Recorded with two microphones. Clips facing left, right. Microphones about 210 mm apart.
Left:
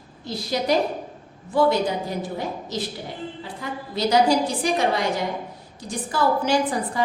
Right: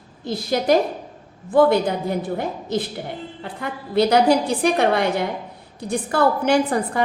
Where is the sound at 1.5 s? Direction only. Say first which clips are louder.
Right 4 dB; 50° right (ahead or behind).